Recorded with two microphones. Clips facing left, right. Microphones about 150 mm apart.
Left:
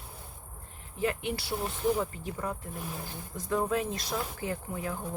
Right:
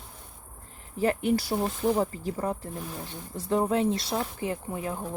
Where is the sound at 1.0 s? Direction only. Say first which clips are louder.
Right 6 dB; 40° right (ahead or behind); by 5.0 s 20° right (ahead or behind).